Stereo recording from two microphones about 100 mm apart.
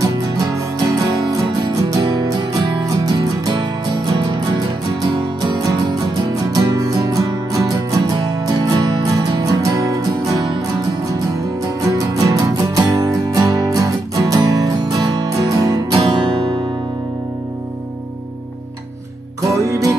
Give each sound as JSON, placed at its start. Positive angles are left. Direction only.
{"t": 0.0, "sound": "music", "side_deg": -35}
{"t": 11.8, "sound": "music", "side_deg": -35}
{"t": 16.0, "sound": "music", "side_deg": -65}
{"t": 19.5, "sound": "music", "side_deg": -30}